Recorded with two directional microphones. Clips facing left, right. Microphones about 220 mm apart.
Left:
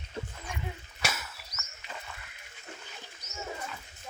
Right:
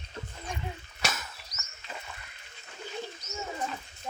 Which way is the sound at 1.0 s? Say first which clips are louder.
Right 1 dB; 10° left (ahead or behind).